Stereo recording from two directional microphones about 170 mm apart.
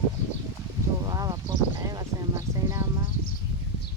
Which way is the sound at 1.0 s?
20° right (ahead or behind).